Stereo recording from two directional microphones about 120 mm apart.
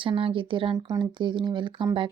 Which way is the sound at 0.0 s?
45° right (ahead or behind).